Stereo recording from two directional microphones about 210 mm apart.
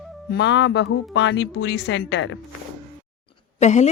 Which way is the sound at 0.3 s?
55° left (ahead or behind).